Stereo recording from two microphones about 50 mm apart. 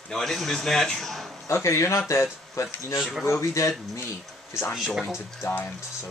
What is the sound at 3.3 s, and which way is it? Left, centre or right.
Speech, left.